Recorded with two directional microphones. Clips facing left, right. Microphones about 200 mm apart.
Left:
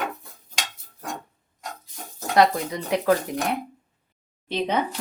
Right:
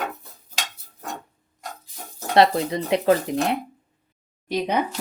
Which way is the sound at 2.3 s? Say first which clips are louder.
Right 2 dB; 25° right (ahead or behind).